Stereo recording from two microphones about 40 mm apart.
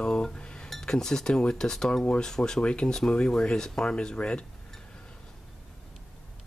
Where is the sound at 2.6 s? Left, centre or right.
Left.